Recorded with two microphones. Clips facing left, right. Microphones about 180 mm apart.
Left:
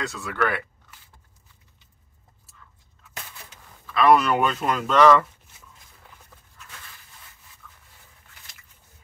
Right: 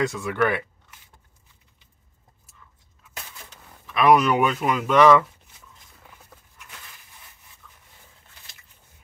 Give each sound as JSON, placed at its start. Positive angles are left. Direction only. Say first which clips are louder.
{"t": 0.1, "sound": "speech", "louder": "right 3 dB", "side_deg": -20}
{"t": 3.8, "sound": "speech", "louder": "right 1 dB", "side_deg": -15}
{"t": 7.6, "sound": "a sound", "louder": "left 2 dB", "side_deg": -15}